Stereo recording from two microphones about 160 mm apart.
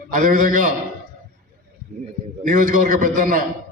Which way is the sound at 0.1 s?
55° right (ahead or behind).